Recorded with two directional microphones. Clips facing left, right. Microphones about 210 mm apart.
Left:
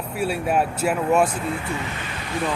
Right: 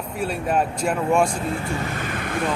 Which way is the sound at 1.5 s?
45° right (ahead or behind).